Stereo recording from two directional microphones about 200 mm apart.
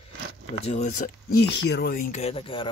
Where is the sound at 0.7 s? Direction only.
35° left (ahead or behind).